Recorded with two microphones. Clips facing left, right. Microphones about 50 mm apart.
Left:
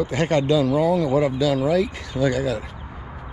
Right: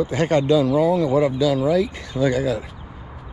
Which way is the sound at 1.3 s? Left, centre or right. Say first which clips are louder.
Right 1 dB; left.